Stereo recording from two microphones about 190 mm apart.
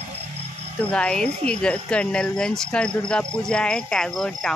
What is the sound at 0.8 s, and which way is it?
Speech, 5° left (ahead or behind).